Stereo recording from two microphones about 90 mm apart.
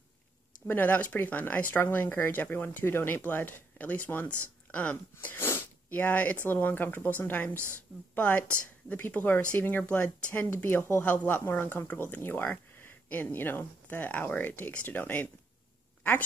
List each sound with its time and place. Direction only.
0.7 s speech: 20° left (ahead or behind)
7.5 s a woman's voice: 25° right (ahead or behind)
8.1 s speech: 20° left (ahead or behind)